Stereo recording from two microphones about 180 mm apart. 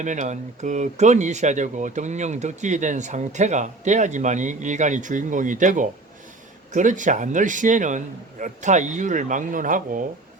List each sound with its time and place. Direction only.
0.0 s a man's voice: 45° right (ahead or behind)